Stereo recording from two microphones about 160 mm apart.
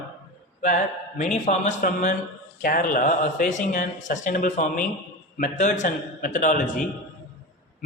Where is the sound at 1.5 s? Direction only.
50° left (ahead or behind).